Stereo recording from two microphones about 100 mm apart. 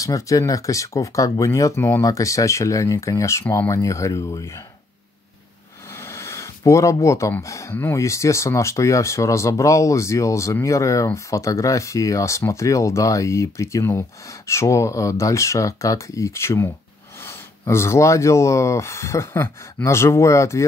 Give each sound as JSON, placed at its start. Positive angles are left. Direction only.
{"t": 0.0, "sound": "speech", "side_deg": 35}
{"t": 5.9, "sound": "a sound", "side_deg": 30}
{"t": 7.4, "sound": "speech", "side_deg": 30}